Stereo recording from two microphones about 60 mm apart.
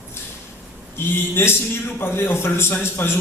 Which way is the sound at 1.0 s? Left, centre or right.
Left.